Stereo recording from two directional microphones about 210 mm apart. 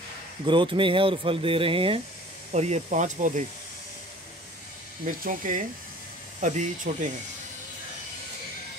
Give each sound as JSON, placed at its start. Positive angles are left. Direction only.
{"t": 0.5, "sound": "speech", "side_deg": -25}
{"t": 5.0, "sound": "speech", "side_deg": -40}